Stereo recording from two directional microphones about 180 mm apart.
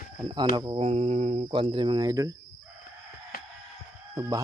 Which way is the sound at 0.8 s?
35° right (ahead or behind).